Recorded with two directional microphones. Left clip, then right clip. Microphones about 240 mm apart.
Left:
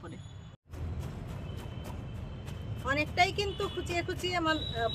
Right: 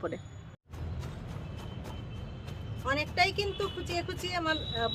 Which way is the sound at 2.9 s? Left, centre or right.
Centre.